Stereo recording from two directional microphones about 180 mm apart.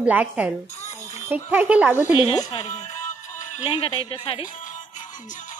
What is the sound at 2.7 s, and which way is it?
Music, 40° left (ahead or behind).